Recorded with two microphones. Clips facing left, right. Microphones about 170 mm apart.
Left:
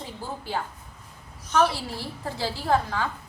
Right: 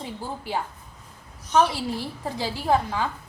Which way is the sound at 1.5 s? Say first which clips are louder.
Right 2 dB; 15° right (ahead or behind).